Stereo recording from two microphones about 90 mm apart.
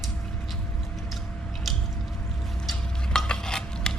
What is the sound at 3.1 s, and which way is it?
Dishes, 5° left (ahead or behind).